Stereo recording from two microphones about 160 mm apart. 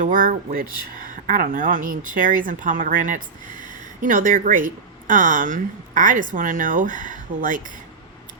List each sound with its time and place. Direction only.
0.0 s speech: 55° right (ahead or behind)